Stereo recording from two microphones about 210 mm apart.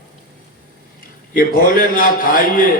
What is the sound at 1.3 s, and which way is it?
A man's voice, 40° left (ahead or behind).